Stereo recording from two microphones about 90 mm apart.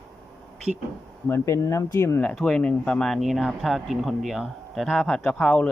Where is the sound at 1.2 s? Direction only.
30° left (ahead or behind).